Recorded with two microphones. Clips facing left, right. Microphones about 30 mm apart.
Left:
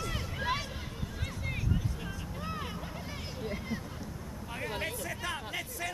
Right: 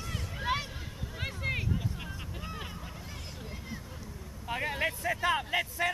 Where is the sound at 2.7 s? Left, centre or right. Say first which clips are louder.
Left 3 dB; centre.